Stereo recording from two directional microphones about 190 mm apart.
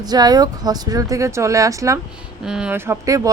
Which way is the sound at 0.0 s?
20° right (ahead or behind).